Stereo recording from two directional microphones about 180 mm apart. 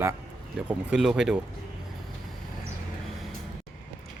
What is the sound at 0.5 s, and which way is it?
Speech, 5° right (ahead or behind).